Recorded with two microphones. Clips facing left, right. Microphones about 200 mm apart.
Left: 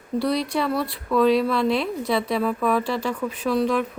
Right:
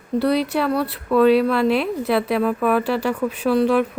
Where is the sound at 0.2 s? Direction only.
5° right (ahead or behind).